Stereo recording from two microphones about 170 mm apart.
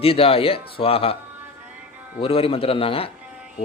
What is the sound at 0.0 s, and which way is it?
Speech, 35° left (ahead or behind).